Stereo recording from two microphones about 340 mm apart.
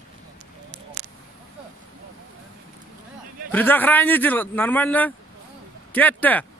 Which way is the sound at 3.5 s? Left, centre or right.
Centre.